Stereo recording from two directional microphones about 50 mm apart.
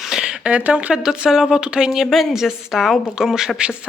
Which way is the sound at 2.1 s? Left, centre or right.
Centre.